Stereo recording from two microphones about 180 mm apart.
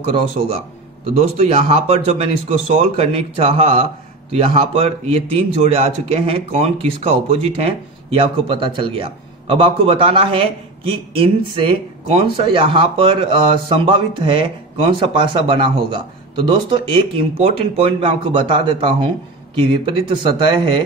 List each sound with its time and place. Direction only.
0.4 s speech: 35° right (ahead or behind)